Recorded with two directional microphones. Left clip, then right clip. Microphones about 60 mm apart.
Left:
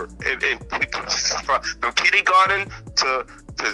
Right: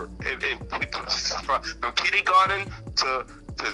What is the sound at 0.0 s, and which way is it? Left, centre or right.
Speech, left.